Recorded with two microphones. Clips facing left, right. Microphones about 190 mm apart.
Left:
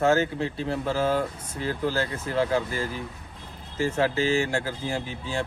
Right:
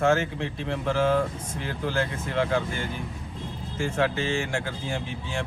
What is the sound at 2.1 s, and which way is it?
Speech, 35° left (ahead or behind).